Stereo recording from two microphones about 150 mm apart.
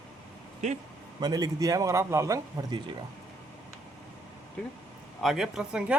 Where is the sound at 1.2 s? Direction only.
25° right (ahead or behind).